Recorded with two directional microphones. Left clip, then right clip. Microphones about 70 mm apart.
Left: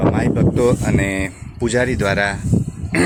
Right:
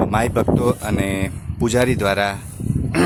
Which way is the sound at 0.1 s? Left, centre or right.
Right.